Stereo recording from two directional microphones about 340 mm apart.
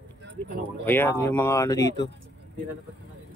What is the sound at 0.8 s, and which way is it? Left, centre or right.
Speech, centre.